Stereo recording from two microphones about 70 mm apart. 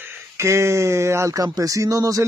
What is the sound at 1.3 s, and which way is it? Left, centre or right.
Speech, right.